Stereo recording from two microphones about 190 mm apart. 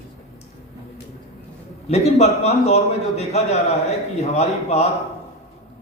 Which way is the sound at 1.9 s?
35° left (ahead or behind).